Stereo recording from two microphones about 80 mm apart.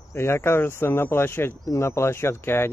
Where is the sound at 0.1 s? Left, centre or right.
Left.